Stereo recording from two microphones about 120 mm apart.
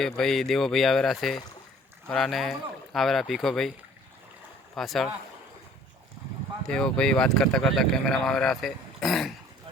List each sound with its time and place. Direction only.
0.0 s speech: 5° left (ahead or behind)
4.7 s speech: centre (ahead or behind)
6.7 s speech: 5° left (ahead or behind)